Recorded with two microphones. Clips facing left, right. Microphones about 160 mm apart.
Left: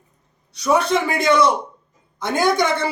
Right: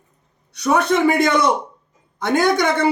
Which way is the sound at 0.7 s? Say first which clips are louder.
Right 3 dB; 55° right (ahead or behind).